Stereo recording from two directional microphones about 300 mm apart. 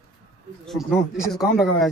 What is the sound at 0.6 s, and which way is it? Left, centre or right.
Speech, centre.